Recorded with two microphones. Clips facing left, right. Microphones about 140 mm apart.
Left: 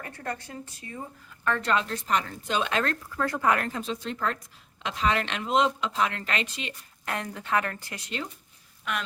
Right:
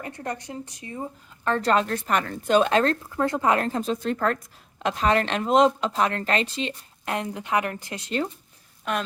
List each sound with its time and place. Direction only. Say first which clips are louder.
0.0 s speech: right 3 dB; 20° right (ahead or behind)
1.5 s speech: right 4 dB; 35° right (ahead or behind)
1.9 s speech: right 3 dB; 60° right (ahead or behind); by 8.0 s 20° right (ahead or behind)